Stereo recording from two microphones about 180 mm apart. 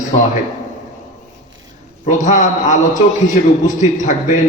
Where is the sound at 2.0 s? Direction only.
40° left (ahead or behind).